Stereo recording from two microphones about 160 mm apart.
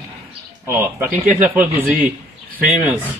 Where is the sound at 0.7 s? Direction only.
15° right (ahead or behind).